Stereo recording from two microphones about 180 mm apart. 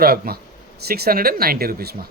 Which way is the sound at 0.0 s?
60° right (ahead or behind).